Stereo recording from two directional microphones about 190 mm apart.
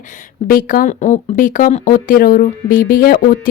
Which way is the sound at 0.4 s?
50° left (ahead or behind).